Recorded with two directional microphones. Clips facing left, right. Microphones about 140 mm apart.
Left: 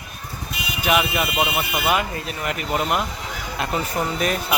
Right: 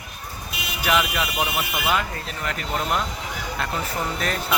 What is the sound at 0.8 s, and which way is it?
Speech, 15° left (ahead or behind).